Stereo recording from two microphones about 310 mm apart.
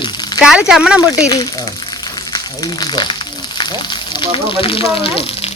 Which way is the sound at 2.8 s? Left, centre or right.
Centre.